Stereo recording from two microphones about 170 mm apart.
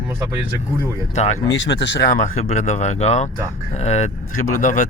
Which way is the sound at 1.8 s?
90° left.